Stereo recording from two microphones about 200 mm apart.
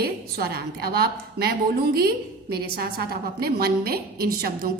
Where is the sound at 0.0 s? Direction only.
50° right (ahead or behind).